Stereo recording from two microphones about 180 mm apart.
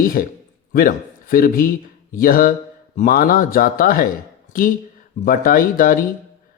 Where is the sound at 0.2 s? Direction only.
50° left (ahead or behind).